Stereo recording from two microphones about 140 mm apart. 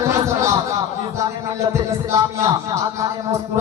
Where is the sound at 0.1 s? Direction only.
20° right (ahead or behind).